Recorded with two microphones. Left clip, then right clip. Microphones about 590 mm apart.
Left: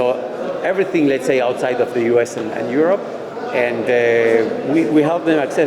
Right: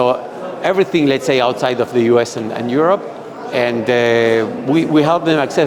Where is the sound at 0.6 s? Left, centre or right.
Right.